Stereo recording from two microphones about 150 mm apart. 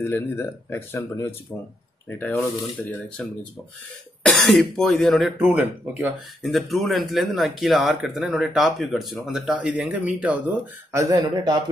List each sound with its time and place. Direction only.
0.0 s speech: 15° left (ahead or behind)
3.2 s speech: 5° left (ahead or behind)
5.5 s speech: 10° right (ahead or behind)
6.4 s speech: centre (ahead or behind)
10.9 s speech: 20° right (ahead or behind)